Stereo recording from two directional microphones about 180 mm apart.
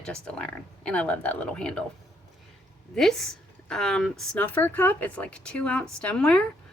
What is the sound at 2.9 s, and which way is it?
A woman's voice, 5° left (ahead or behind).